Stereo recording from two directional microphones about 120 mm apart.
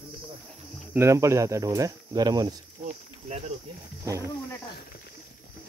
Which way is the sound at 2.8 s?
65° right (ahead or behind).